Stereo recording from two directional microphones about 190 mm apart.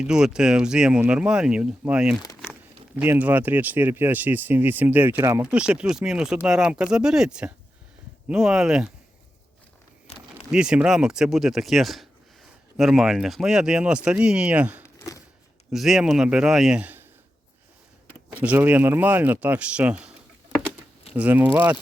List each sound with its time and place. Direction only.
0.0 s speech: 5° right (ahead or behind)
10.1 s a sound: 35° left (ahead or behind)
10.5 s speech: 5° right (ahead or behind)
14.8 s a sound: 15° left (ahead or behind)
15.7 s speech: centre (ahead or behind)
18.3 s speech: 10° right (ahead or behind)
21.2 s speech: 10° right (ahead or behind)